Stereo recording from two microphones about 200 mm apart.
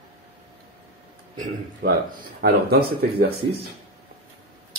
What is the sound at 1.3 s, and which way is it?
Speech, 40° right (ahead or behind).